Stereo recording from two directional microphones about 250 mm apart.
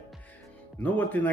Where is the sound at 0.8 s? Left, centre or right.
Centre.